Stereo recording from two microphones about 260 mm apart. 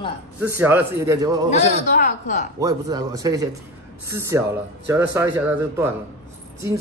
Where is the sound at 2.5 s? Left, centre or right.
Centre.